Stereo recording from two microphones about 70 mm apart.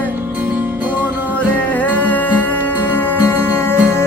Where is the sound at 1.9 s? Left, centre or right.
Left.